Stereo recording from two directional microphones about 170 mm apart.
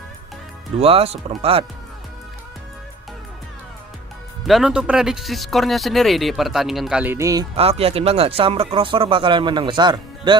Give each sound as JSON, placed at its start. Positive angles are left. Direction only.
{"t": 0.8, "sound": "speech", "side_deg": -35}
{"t": 4.4, "sound": "speech", "side_deg": 0}
{"t": 7.5, "sound": "speech", "side_deg": -35}